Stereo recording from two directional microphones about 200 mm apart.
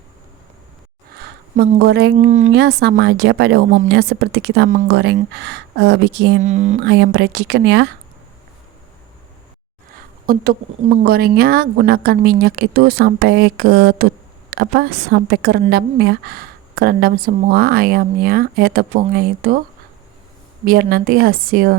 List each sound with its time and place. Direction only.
1.2 s a sound: 55° right (ahead or behind)
2.1 s music: 35° right (ahead or behind)
2.5 s speech: 55° right (ahead or behind)
6.4 s music: 35° right (ahead or behind)
6.8 s speech: 55° right (ahead or behind)
10.2 s a woman's voice: 45° right (ahead or behind)
20.7 s a woman's voice: 45° right (ahead or behind)